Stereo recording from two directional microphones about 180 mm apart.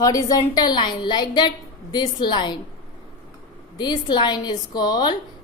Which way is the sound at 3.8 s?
25° left (ahead or behind).